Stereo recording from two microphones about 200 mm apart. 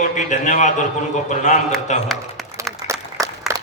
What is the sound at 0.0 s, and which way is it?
A man's voice, 40° left (ahead or behind).